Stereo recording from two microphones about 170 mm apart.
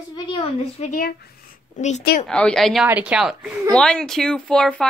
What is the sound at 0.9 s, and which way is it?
Speech, 55° left (ahead or behind).